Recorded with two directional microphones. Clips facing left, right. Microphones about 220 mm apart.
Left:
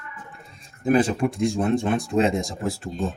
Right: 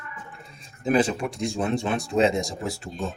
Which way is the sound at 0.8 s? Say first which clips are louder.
Left 3 dB; 55° left (ahead or behind).